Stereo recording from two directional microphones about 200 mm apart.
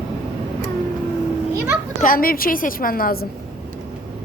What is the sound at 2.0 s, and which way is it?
A woman's voice, 45° left (ahead or behind).